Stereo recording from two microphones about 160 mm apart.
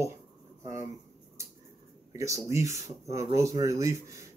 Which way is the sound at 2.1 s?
20° right (ahead or behind).